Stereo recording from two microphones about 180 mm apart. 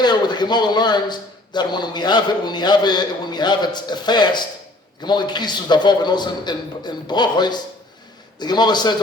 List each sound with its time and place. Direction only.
0.0 s a man's voice: 25° left (ahead or behind)